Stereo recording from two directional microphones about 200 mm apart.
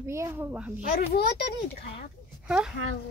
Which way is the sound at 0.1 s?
15° right (ahead or behind).